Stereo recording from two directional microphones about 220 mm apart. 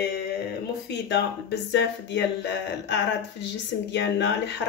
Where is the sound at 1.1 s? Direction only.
50° left (ahead or behind).